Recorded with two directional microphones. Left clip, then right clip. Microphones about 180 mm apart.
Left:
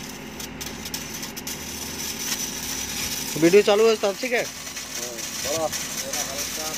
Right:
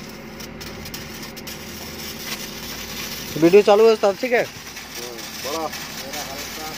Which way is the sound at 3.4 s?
10° right (ahead or behind).